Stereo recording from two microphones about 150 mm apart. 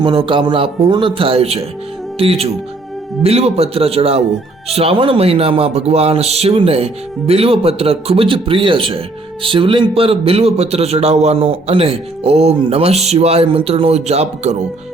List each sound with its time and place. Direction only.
0.0 s a man's voice: 35° right (ahead or behind)